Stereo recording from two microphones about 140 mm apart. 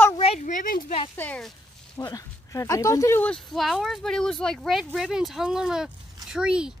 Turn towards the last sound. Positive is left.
turn(degrees=-5)  # may be behind; listen again after turning